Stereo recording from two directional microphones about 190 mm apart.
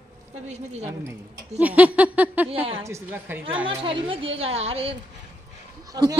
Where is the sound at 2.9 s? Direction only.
15° right (ahead or behind).